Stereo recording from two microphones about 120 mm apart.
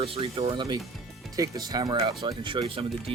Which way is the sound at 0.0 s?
55° right (ahead or behind).